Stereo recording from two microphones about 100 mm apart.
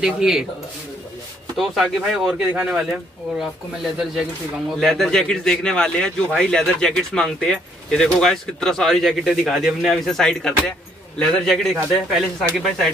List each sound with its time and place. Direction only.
0.0 s speech: 5° right (ahead or behind)
1.6 s speech: centre (ahead or behind)